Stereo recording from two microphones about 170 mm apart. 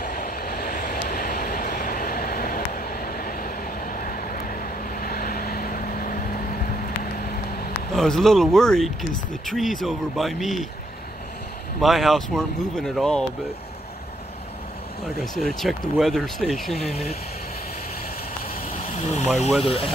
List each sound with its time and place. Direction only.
0.0 s vehicle: 60° left (ahead or behind)
7.9 s speech: centre (ahead or behind)
11.8 s speech: centre (ahead or behind)
15.1 s speech: centre (ahead or behind)
18.8 s vehicle: 40° left (ahead or behind)
19.6 s speech: 35° left (ahead or behind)